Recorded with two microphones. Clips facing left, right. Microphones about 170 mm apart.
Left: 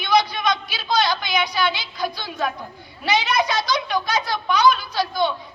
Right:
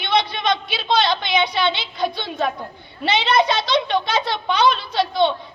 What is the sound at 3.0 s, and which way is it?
A child's voice, 25° right (ahead or behind).